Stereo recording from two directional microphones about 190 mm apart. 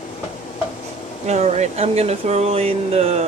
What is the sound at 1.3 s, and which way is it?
Speech, 35° right (ahead or behind).